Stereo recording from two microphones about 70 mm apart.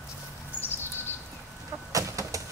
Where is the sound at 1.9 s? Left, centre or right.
Right.